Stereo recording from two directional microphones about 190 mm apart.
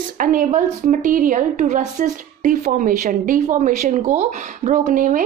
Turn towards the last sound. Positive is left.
turn(degrees=-45)  # may be behind; listen again after turning